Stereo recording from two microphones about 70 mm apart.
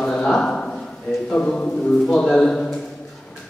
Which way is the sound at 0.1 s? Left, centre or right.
Centre.